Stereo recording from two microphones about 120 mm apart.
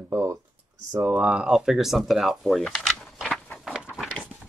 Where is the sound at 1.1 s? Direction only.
5° right (ahead or behind).